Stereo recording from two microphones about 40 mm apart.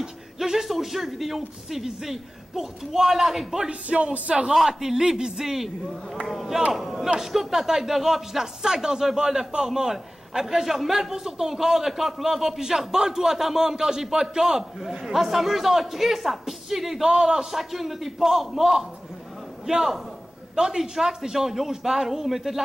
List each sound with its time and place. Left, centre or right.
0.0 s a man's voice: centre
3.6 s a man's voice: right
4.6 s a man's voice: centre